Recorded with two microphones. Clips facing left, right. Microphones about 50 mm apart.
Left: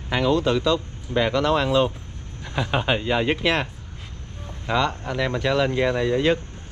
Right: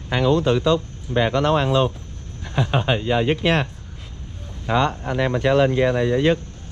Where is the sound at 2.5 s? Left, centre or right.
Left.